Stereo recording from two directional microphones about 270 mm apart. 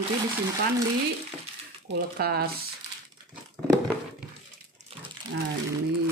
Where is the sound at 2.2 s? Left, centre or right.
Right.